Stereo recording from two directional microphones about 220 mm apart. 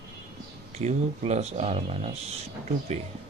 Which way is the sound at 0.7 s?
30° right (ahead or behind).